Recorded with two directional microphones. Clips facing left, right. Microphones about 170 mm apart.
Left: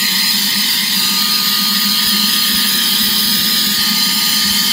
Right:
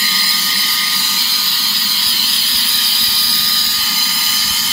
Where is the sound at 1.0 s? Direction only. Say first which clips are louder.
Left 6 dB; 80° left.